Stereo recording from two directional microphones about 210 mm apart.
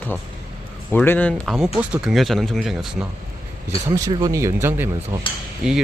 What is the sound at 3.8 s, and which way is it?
Speech, 15° right (ahead or behind).